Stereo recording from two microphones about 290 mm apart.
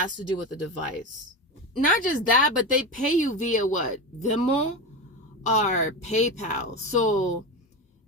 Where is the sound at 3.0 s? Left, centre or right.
Left.